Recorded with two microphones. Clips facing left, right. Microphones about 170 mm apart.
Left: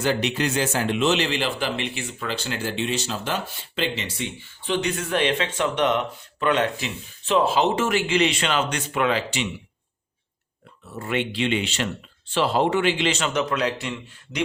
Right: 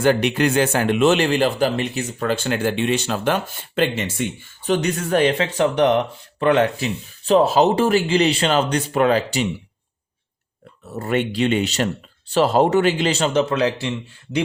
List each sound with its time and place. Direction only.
0.0 s a man's voice: 55° right (ahead or behind)
10.8 s speech: 40° right (ahead or behind)